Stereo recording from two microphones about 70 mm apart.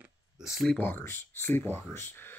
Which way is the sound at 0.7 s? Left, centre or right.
Left.